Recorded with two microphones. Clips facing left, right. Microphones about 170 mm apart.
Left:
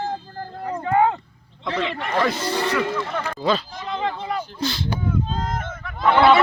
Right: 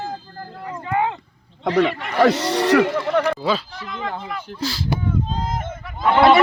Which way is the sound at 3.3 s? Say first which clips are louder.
Even; 5° right (ahead or behind).